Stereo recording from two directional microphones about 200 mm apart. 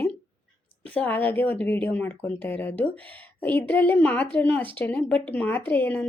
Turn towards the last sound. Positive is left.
turn(degrees=10)  # may be behind; listen again after turning